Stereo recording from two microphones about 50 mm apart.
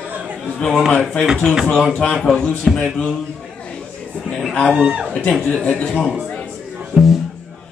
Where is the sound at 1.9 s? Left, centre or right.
Centre.